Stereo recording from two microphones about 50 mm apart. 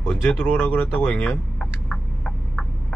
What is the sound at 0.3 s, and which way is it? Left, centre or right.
Speech, left.